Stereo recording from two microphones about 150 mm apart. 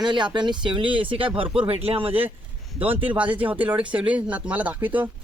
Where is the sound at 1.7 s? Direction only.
40° right (ahead or behind).